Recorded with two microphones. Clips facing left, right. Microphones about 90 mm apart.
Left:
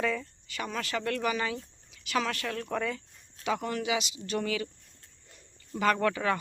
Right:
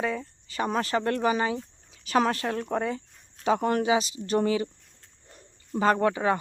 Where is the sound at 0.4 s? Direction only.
35° right (ahead or behind).